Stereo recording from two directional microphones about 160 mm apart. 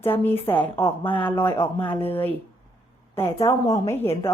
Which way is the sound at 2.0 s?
15° left (ahead or behind).